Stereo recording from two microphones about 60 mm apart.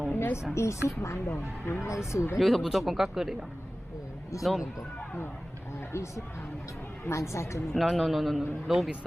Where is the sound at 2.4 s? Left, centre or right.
Centre.